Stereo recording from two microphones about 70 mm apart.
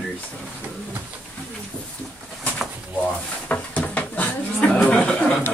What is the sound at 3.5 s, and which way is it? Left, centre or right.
Drawer open or close, left.